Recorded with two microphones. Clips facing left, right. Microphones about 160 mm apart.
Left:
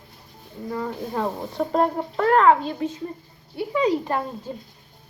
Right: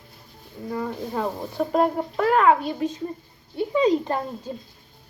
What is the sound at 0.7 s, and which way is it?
Speech, 10° right (ahead or behind).